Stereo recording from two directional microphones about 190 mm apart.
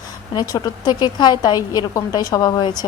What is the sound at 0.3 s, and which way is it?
A woman's voice, 20° left (ahead or behind).